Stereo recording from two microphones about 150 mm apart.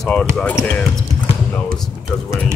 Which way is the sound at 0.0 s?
5° left (ahead or behind).